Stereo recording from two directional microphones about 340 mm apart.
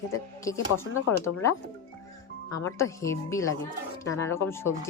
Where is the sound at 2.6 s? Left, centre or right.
Centre.